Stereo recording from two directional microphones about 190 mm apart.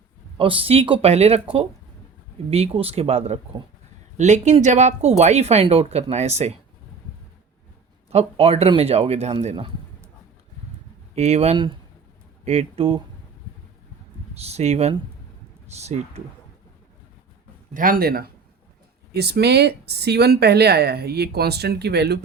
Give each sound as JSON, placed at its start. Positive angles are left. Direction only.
{"t": 0.3, "sound": "speech", "side_deg": -30}
{"t": 2.5, "sound": "speech", "side_deg": -30}
{"t": 8.1, "sound": "speech", "side_deg": -35}
{"t": 11.1, "sound": "speech", "side_deg": -35}
{"t": 14.3, "sound": "speech", "side_deg": -35}
{"t": 17.7, "sound": "speech", "side_deg": -45}